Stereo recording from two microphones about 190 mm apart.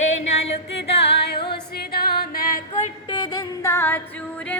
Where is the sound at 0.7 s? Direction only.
60° left (ahead or behind).